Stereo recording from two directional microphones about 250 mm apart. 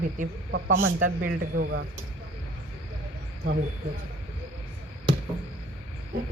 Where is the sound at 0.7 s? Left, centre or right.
Right.